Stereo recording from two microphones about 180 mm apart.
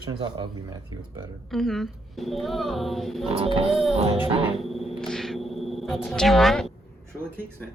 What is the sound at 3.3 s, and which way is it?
Music, 30° right (ahead or behind).